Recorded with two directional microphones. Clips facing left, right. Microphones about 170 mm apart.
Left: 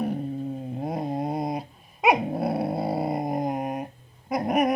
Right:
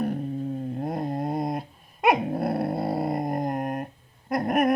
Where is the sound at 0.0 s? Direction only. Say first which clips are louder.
Even; centre (ahead or behind).